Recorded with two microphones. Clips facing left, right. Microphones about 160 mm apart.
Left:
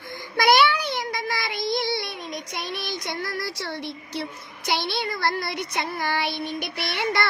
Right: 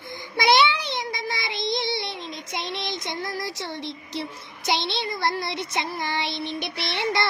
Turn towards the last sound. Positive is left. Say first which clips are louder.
# even
turn(degrees=-25)  # may be behind; listen again after turning